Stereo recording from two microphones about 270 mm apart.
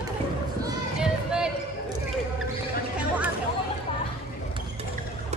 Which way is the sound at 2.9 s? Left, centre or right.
Centre.